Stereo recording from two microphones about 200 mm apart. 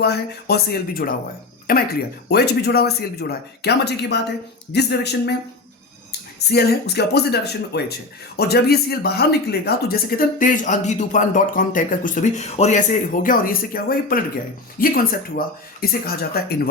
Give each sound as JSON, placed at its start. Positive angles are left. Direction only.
{"t": 0.0, "sound": "speech", "side_deg": 55}